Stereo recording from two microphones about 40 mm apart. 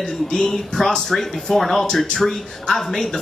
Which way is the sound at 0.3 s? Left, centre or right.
Centre.